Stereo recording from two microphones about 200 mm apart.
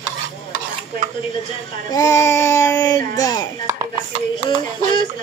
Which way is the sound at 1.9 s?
15° left (ahead or behind).